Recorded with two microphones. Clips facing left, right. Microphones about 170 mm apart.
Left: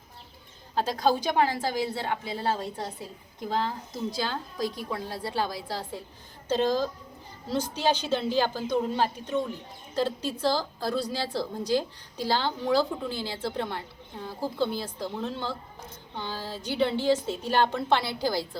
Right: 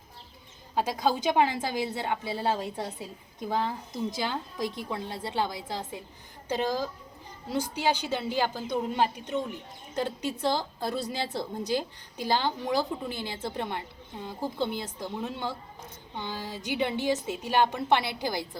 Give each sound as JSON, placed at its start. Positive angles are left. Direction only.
{"t": 0.8, "sound": "a woman's voice", "side_deg": -20}
{"t": 4.1, "sound": "a woman's voice", "side_deg": -20}